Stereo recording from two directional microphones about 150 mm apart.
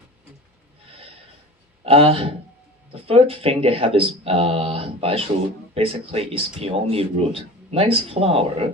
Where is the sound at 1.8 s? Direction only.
40° right (ahead or behind).